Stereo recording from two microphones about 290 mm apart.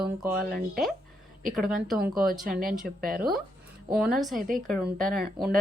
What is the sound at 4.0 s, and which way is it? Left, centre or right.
A woman's voice, centre.